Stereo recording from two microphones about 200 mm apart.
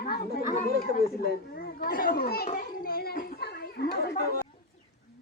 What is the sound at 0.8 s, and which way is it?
Speech, 50° left (ahead or behind).